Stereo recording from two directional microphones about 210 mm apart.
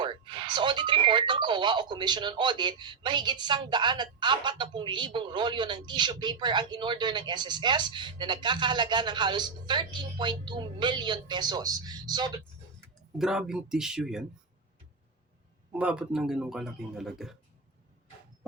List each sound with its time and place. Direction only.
0.0 s speech: 20° right (ahead or behind)
13.1 s speech: 5° right (ahead or behind)
15.7 s speech: 5° right (ahead or behind)